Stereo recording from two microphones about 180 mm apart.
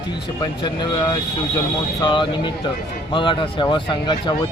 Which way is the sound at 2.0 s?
25° left (ahead or behind).